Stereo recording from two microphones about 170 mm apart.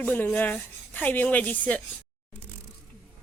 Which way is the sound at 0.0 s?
10° left (ahead or behind).